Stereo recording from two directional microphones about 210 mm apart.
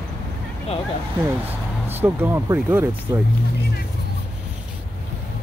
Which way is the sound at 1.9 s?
10° right (ahead or behind).